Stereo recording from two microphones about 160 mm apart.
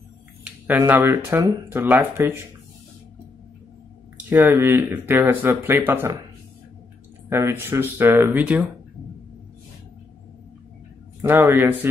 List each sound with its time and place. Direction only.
0.4 s speech: 10° right (ahead or behind)
4.3 s speech: 15° right (ahead or behind)
7.2 s speech: 15° right (ahead or behind)
11.2 s speech: 15° right (ahead or behind)